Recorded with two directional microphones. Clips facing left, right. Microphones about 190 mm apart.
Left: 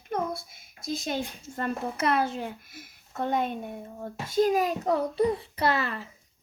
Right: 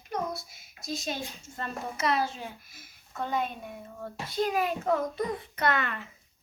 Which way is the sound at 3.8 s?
30° left (ahead or behind).